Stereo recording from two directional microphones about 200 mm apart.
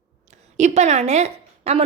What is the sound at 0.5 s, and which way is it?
A woman's voice, 35° right (ahead or behind).